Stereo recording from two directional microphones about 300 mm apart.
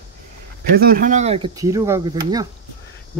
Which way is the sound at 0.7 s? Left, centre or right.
Right.